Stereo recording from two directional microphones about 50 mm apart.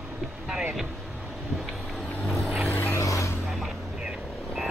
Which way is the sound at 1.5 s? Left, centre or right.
Centre.